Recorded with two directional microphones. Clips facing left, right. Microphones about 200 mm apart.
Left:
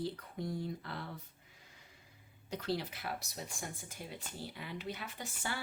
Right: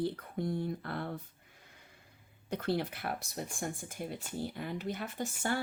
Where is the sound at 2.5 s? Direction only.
55° right (ahead or behind).